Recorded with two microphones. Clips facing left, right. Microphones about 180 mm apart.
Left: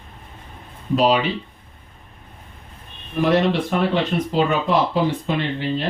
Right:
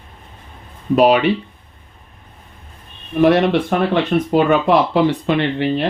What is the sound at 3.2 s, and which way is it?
Speech, 60° right (ahead or behind).